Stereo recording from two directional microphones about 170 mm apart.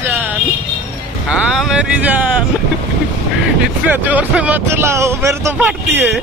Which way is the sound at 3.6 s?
10° right (ahead or behind).